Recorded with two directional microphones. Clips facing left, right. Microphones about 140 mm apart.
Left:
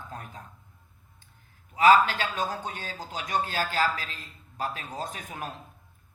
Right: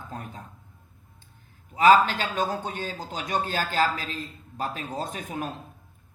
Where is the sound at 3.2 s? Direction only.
30° right (ahead or behind).